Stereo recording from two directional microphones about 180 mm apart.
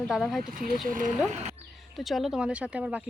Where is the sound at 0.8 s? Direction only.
50° right (ahead or behind).